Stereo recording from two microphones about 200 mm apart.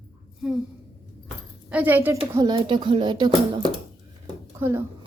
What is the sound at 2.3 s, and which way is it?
Speech, 20° right (ahead or behind).